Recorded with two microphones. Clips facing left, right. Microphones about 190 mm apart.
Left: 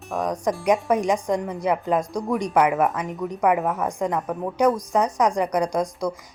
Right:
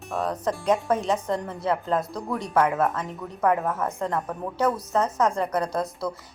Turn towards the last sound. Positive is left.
turn(degrees=15)  # may be behind; listen again after turning